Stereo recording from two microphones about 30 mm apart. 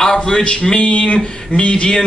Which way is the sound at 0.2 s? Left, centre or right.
Left.